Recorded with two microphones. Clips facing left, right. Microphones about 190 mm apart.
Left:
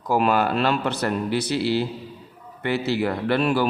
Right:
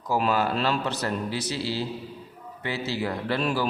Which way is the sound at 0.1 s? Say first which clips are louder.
Left 4 dB; 60° left (ahead or behind).